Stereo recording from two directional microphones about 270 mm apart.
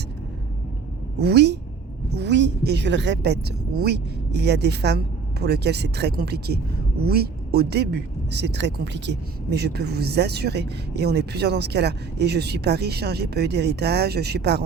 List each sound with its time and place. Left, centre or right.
1.2 s speech: right